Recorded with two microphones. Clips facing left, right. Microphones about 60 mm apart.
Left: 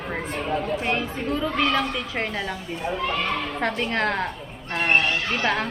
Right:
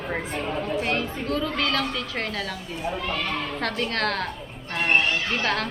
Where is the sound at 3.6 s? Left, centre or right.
Centre.